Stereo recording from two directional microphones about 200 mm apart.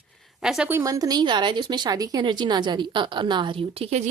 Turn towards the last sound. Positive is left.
turn(degrees=-30)  # may be behind; listen again after turning